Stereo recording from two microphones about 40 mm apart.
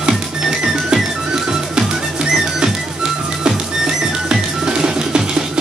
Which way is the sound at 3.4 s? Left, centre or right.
Centre.